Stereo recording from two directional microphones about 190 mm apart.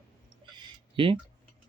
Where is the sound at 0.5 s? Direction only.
25° right (ahead or behind).